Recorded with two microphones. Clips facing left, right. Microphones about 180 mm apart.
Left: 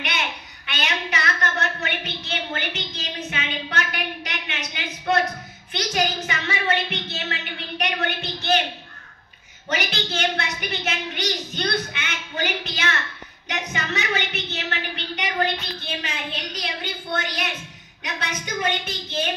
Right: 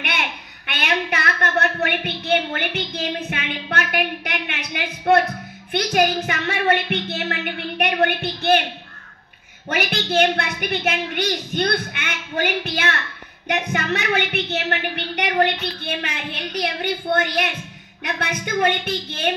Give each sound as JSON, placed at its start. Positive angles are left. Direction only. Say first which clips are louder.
{"t": 0.0, "sound": "a sound", "louder": "right 2 dB", "side_deg": -55}
{"t": 5.7, "sound": "speech", "louder": "right 6 dB", "side_deg": -55}
{"t": 9.7, "sound": "a woman's voice", "louder": "right 4 dB", "side_deg": -55}